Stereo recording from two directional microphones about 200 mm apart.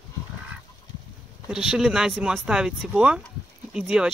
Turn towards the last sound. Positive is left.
turn(degrees=-5)  # may be behind; listen again after turning